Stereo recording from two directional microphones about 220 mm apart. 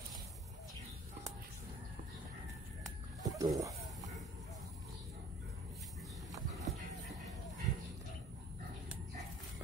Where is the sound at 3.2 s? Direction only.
15° right (ahead or behind).